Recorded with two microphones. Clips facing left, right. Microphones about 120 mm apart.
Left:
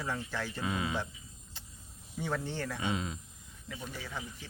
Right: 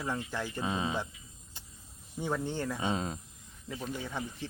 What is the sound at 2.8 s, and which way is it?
Speech, 35° right (ahead or behind).